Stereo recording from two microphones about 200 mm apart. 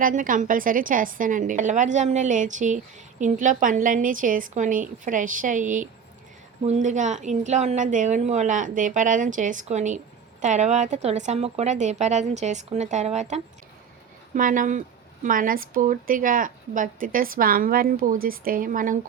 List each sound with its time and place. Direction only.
0.0 s a woman's voice: 40° right (ahead or behind)